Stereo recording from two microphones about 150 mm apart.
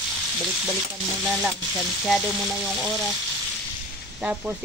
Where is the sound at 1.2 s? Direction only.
5° right (ahead or behind).